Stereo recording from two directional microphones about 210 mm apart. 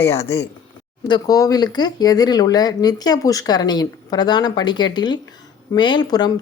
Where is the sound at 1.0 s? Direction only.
20° left (ahead or behind).